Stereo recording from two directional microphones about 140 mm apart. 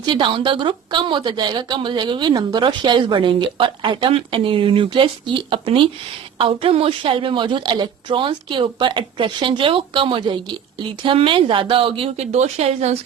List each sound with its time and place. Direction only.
0.0 s a woman's voice: 35° right (ahead or behind)